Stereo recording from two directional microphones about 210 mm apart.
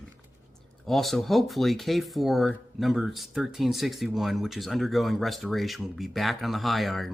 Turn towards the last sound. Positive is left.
turn(degrees=0)  # may be behind; listen again after turning